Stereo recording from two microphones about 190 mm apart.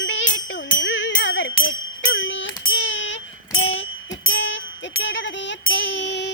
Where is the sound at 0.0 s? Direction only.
75° left (ahead or behind).